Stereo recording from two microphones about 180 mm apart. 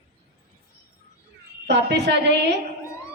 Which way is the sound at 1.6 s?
70° right (ahead or behind).